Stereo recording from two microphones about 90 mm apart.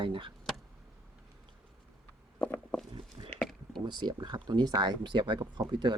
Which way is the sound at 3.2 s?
45° right (ahead or behind).